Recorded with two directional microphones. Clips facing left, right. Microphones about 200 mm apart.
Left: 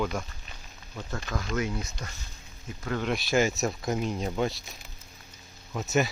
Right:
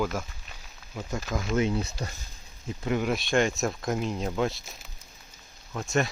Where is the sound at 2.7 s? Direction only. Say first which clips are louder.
Right 4 dB; 20° right (ahead or behind).